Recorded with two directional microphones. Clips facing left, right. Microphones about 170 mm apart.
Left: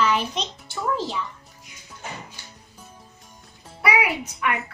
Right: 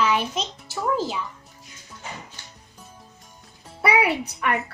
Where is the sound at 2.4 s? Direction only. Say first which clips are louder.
Left 1 dB; 10° left (ahead or behind).